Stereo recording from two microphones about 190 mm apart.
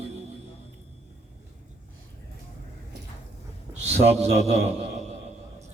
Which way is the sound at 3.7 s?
35° right (ahead or behind).